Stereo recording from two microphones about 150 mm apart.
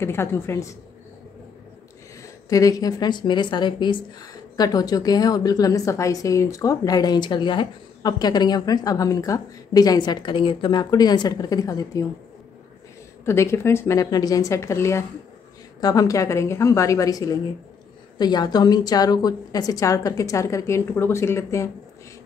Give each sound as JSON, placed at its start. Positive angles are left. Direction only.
{"t": 0.0, "sound": "a woman's voice", "side_deg": 15}
{"t": 2.2, "sound": "a woman's voice", "side_deg": 25}
{"t": 13.2, "sound": "a woman's voice", "side_deg": 15}